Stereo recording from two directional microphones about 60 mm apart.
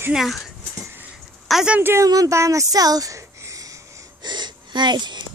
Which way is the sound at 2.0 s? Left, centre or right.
Right.